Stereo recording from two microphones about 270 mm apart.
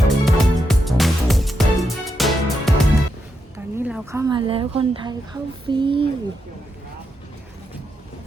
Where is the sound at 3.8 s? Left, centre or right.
Centre.